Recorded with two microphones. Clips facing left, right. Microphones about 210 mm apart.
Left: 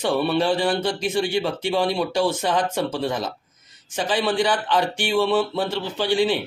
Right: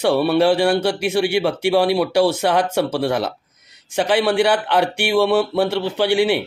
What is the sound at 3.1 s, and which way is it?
Speech, 70° right (ahead or behind).